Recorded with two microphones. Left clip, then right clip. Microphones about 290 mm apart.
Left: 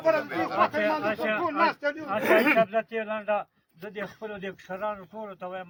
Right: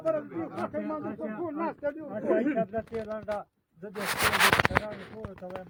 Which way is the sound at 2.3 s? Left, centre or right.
Left.